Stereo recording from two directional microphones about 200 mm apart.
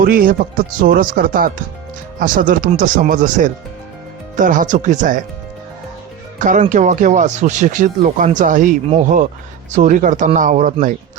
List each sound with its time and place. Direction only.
0.0 s speech: 45° right (ahead or behind)
6.4 s speech: 40° right (ahead or behind)